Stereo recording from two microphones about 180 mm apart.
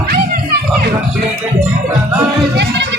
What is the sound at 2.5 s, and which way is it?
Music, 70° right (ahead or behind).